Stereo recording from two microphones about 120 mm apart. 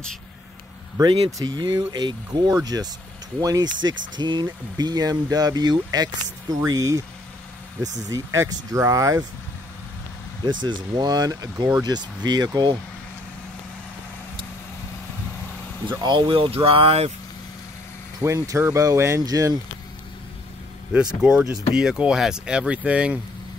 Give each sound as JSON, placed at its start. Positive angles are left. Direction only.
{"t": 1.4, "sound": "speech", "side_deg": -35}
{"t": 10.4, "sound": "speech", "side_deg": -40}
{"t": 15.9, "sound": "speech", "side_deg": -40}
{"t": 18.2, "sound": "speech", "side_deg": -25}
{"t": 20.9, "sound": "speech", "side_deg": -10}